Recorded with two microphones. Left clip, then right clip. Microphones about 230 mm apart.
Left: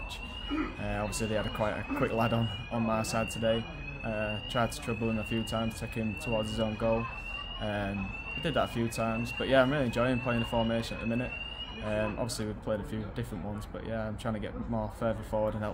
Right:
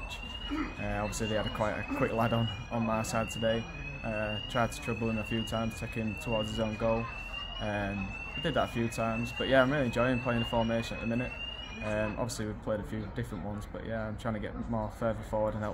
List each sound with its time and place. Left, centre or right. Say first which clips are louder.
1.3 s speech: even; centre